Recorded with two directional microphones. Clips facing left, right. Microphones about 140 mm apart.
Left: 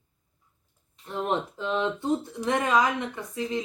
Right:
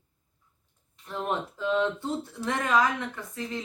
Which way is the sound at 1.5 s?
20° left (ahead or behind).